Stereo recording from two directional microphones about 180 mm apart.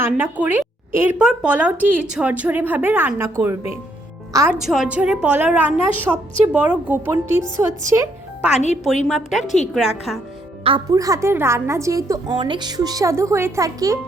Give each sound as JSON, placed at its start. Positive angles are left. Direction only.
{"t": 0.0, "sound": "a woman's voice", "side_deg": -10}
{"t": 4.6, "sound": "a woman's voice", "side_deg": -5}
{"t": 8.5, "sound": "speech", "side_deg": 40}
{"t": 9.0, "sound": "a woman's voice", "side_deg": 0}
{"t": 10.9, "sound": "a woman's voice", "side_deg": -20}